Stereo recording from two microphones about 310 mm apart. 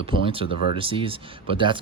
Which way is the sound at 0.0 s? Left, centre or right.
Centre.